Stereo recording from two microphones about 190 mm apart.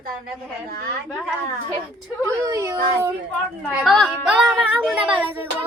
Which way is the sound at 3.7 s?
Centre (ahead or behind).